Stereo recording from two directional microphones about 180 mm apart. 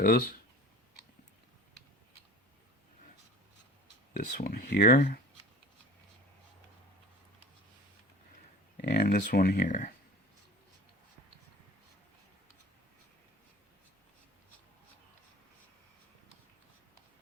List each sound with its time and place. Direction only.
0.0 s speech: 55° left (ahead or behind)
4.1 s speech: 45° left (ahead or behind)
8.8 s speech: 60° left (ahead or behind)